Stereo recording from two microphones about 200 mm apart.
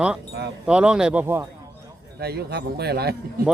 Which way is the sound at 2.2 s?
50° right (ahead or behind).